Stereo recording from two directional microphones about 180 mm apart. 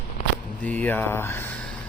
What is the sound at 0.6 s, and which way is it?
Speech, 10° left (ahead or behind).